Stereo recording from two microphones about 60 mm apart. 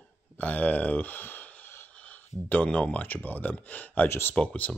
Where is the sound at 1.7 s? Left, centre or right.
Left.